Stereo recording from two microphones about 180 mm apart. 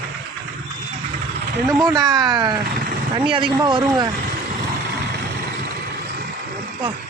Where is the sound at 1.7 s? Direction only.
20° right (ahead or behind).